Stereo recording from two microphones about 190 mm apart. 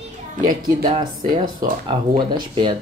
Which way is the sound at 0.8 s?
25° right (ahead or behind).